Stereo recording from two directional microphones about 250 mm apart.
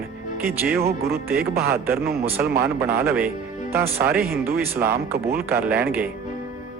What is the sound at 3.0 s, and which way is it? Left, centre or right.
Speech, centre.